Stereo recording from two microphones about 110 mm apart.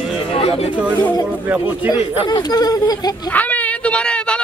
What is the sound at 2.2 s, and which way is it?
Speech, 40° left (ahead or behind).